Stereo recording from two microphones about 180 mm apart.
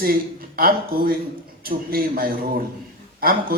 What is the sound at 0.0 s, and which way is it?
Speech, 55° right (ahead or behind).